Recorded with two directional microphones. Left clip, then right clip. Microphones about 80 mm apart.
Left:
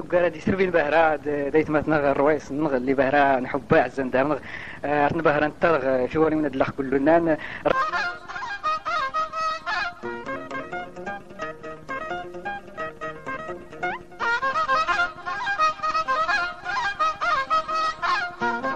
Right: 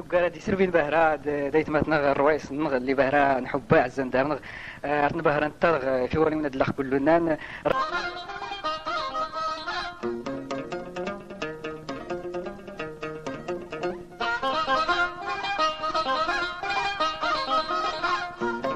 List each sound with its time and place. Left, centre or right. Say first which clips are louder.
0.1 s a man's voice: left 2 dB; centre
7.1 s a man's voice: left 3 dB; right
7.8 s honk: left 3 dB; left
11.0 s music: even; left
15.6 s music: left 3 dB; left
17.0 s music: left 3 dB; left